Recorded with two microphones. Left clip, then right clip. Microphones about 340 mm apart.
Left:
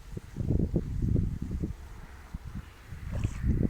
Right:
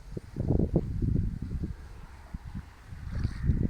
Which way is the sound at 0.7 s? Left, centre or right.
Right.